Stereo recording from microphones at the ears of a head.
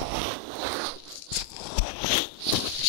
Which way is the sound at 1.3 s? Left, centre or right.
Left.